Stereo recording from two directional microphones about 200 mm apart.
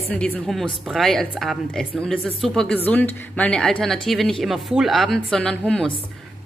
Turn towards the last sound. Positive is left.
turn(degrees=5)  # may be behind; listen again after turning